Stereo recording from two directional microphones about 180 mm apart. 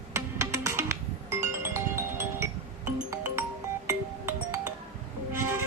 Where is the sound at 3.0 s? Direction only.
15° right (ahead or behind).